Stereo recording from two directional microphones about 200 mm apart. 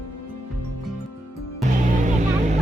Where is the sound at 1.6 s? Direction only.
40° right (ahead or behind).